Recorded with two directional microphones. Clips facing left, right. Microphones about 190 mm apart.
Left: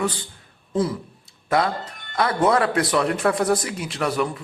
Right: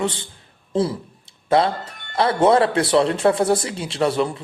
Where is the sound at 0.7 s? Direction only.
30° right (ahead or behind).